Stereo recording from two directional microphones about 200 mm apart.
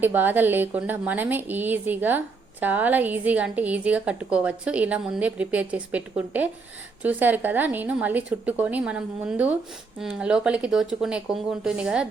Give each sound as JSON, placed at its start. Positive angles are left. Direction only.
{"t": 0.0, "sound": "a woman's voice", "side_deg": -10}